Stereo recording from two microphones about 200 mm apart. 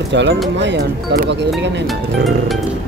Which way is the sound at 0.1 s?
60° right (ahead or behind).